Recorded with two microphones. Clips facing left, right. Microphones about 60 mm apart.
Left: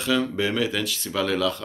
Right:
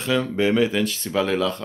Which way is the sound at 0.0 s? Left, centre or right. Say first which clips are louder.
Right 2 dB; right.